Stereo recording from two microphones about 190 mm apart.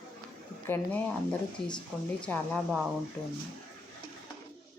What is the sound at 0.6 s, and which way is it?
Speech, 10° left (ahead or behind).